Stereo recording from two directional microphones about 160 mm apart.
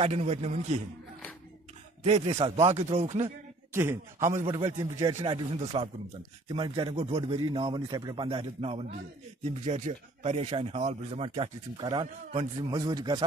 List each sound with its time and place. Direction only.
0.0 s speech: 40° right (ahead or behind)
2.0 s speech: 40° right (ahead or behind)
3.7 s a man's voice: 15° right (ahead or behind)
8.3 s a man's voice: 35° right (ahead or behind)